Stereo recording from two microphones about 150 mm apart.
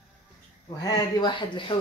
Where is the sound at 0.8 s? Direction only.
30° left (ahead or behind).